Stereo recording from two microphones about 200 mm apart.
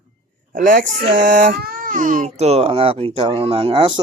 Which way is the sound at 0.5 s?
40° right (ahead or behind).